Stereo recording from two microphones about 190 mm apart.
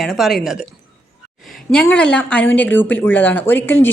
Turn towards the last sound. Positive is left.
turn(degrees=10)  # may be behind; listen again after turning